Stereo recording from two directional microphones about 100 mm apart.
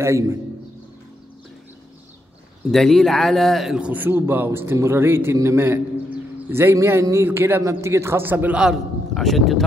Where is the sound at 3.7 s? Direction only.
15° right (ahead or behind).